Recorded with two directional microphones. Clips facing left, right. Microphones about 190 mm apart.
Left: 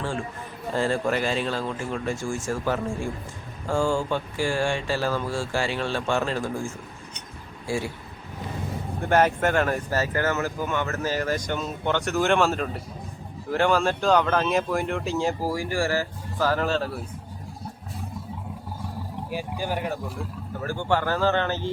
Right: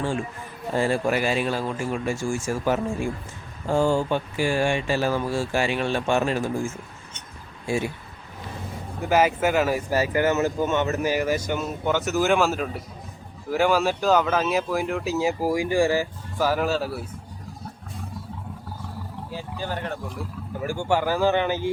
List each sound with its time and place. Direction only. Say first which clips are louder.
0.7 s speech: right 2 dB; 15° right (ahead or behind)
7.7 s speech: right 2 dB; 20° right (ahead or behind)
9.0 s speech: right 1 dB; 5° right (ahead or behind)
19.3 s speech: left 3 dB; 10° left (ahead or behind)
20.1 s speech: right 1 dB; 10° right (ahead or behind)